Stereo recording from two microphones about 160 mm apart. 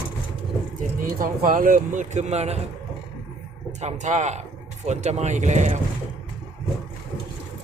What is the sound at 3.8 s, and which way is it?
Speech, 50° right (ahead or behind).